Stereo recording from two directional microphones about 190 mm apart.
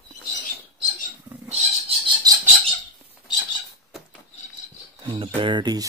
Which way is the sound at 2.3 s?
20° right (ahead or behind).